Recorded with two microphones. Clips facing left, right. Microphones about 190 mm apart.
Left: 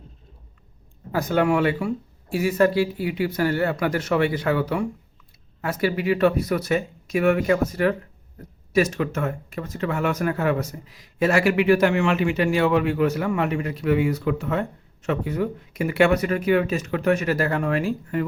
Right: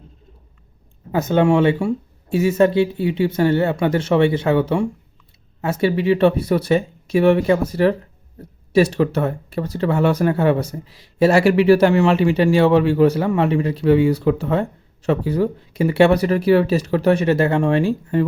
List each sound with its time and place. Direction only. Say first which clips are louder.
1.1 s speech: right 5 dB; 25° right (ahead or behind)